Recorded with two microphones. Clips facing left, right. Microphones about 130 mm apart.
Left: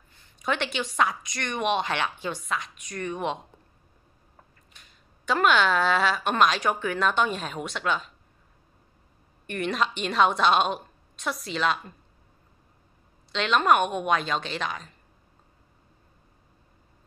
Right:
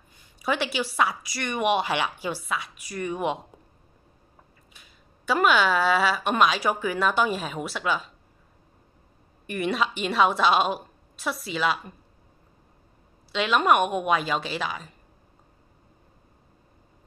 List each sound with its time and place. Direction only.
0.1 s a woman's voice: 10° right (ahead or behind)
4.7 s speech: 5° right (ahead or behind)
9.5 s speech: 5° right (ahead or behind)
13.3 s a woman's voice: 5° right (ahead or behind)